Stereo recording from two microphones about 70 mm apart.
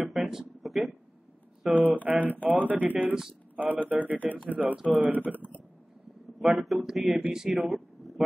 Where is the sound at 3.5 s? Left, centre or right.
Right.